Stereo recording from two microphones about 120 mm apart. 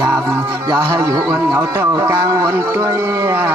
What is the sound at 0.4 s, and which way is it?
Speech, 30° right (ahead or behind).